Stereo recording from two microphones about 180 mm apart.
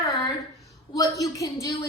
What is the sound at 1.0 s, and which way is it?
Speech, 20° left (ahead or behind).